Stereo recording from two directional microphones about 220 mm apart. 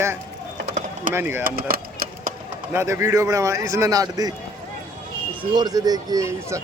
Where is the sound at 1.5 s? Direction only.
40° right (ahead or behind).